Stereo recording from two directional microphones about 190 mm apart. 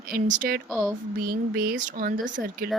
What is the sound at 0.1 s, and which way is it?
Speech, 45° right (ahead or behind).